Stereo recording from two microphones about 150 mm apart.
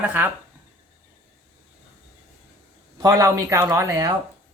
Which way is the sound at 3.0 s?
25° right (ahead or behind).